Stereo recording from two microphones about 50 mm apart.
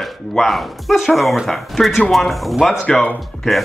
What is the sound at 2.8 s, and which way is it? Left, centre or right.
Speech, left.